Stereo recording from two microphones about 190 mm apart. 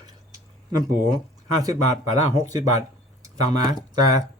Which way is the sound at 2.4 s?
20° right (ahead or behind).